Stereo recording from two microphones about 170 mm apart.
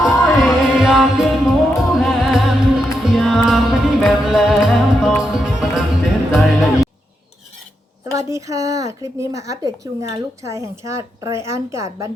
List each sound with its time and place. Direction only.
0.0 s music: centre (ahead or behind)
8.0 s a woman's voice: 20° right (ahead or behind)